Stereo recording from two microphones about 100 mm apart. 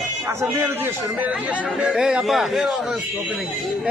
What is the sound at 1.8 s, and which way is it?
A man's voice, 5° right (ahead or behind).